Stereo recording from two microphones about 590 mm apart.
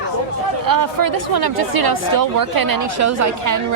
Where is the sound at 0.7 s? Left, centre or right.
Right.